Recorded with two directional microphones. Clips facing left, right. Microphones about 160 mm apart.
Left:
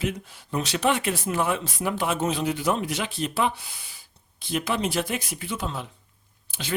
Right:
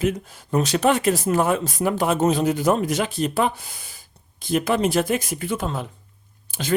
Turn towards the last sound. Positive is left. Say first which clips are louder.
# right 8 dB
turn(degrees=-45)  # may be behind; listen again after turning